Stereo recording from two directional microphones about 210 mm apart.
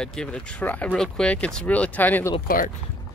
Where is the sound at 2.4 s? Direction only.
40° left (ahead or behind).